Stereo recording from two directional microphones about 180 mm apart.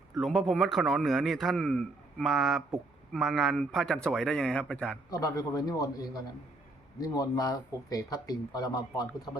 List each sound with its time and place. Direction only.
0.2 s speech: centre (ahead or behind)
5.1 s speech: 20° left (ahead or behind)